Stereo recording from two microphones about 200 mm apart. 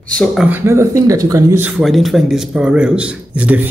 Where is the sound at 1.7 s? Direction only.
Centre (ahead or behind).